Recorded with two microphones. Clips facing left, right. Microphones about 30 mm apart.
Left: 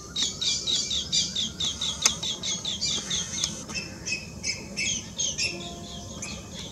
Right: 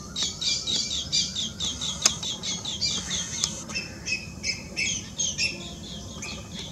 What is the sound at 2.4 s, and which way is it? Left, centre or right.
Bird, centre.